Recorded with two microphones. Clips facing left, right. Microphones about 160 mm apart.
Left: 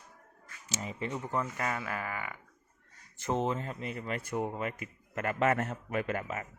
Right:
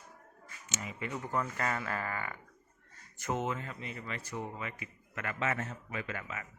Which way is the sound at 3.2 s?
30° left (ahead or behind).